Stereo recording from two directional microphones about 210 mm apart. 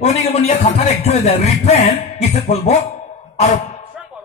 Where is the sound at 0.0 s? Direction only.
30° left (ahead or behind).